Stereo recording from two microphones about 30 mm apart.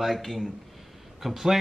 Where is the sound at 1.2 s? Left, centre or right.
Centre.